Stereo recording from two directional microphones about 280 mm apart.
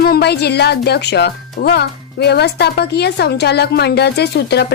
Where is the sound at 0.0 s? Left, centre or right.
Left.